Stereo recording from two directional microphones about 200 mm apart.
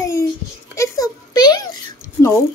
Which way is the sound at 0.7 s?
15° left (ahead or behind).